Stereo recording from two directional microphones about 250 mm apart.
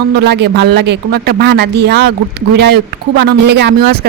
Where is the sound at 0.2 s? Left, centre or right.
Right.